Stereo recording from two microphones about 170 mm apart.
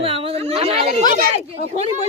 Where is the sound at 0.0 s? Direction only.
35° right (ahead or behind).